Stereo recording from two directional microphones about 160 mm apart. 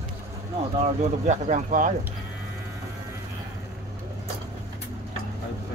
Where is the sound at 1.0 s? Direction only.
45° right (ahead or behind).